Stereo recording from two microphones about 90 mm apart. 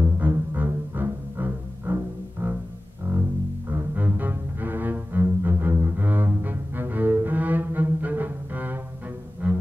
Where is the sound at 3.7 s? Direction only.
20° right (ahead or behind).